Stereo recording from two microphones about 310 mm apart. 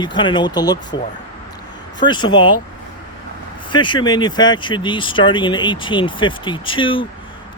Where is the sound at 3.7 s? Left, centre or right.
Centre.